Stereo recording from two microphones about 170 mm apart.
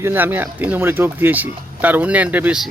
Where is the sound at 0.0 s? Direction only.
10° right (ahead or behind).